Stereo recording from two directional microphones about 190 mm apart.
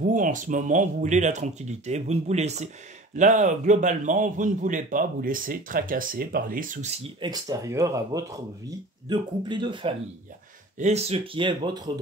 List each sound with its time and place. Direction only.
0.0 s a man's voice: 45° right (ahead or behind); by 11.9 s 20° right (ahead or behind)